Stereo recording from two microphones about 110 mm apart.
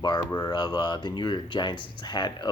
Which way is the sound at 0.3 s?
35° left (ahead or behind).